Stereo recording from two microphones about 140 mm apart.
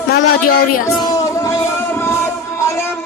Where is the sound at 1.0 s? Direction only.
25° left (ahead or behind).